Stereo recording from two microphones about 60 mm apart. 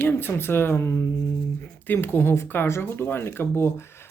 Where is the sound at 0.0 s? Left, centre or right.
Left.